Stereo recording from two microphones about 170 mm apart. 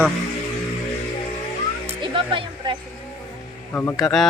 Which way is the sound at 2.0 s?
30° right (ahead or behind).